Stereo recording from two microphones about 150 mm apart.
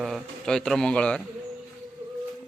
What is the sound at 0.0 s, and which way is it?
A man's voice, centre (ahead or behind).